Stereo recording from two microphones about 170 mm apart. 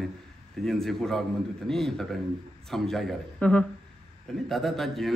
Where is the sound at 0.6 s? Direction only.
Centre (ahead or behind).